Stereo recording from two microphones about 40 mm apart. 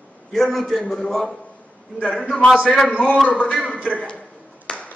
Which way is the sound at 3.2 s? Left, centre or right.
Left.